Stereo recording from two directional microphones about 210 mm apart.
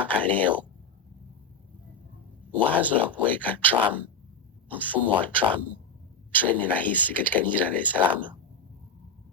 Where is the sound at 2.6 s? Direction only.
10° right (ahead or behind).